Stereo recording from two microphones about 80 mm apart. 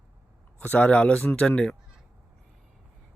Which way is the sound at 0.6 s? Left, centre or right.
Centre.